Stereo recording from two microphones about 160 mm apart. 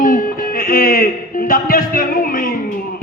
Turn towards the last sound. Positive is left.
turn(degrees=60)  # may be behind; listen again after turning